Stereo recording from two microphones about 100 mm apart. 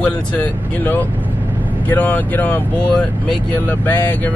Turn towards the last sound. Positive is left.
turn(degrees=20)  # may be behind; listen again after turning